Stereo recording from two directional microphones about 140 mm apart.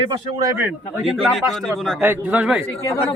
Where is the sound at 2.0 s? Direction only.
10° right (ahead or behind).